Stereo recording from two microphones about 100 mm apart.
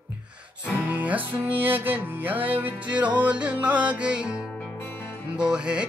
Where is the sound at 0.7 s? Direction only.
15° right (ahead or behind).